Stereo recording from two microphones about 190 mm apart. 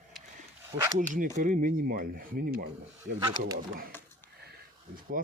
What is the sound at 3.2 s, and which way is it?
Speech, 20° right (ahead or behind).